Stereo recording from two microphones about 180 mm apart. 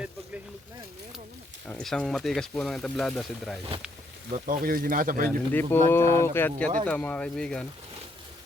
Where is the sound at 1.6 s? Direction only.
5° left (ahead or behind).